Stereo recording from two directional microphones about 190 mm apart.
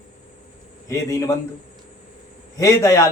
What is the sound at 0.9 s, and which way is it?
Speech, 15° left (ahead or behind).